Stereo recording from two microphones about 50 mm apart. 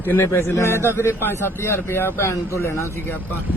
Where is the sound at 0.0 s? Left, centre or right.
Left.